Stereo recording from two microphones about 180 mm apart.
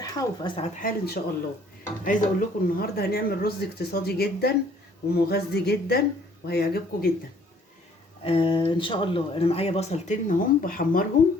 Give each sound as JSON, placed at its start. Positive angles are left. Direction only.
{"t": 0.0, "sound": "speech", "side_deg": 20}
{"t": 0.8, "sound": "speech", "side_deg": 55}
{"t": 8.2, "sound": "speech", "side_deg": 30}